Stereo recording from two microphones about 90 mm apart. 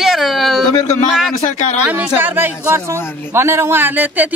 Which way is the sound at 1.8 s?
10° right (ahead or behind).